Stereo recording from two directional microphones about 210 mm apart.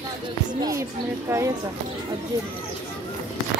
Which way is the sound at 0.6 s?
15° right (ahead or behind).